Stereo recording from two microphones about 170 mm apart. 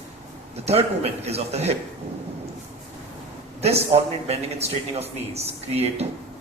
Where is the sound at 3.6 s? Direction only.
35° right (ahead or behind).